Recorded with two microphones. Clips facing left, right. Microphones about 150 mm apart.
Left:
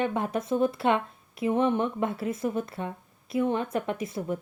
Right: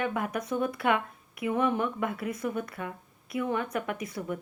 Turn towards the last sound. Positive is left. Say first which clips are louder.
# left 3 dB
turn(degrees=25)  # may be behind; listen again after turning